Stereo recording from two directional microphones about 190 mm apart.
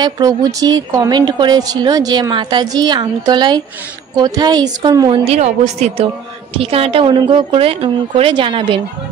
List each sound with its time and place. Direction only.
0.0 s a woman's voice: 20° right (ahead or behind)